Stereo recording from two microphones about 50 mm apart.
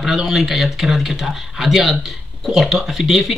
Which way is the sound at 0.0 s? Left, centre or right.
Centre.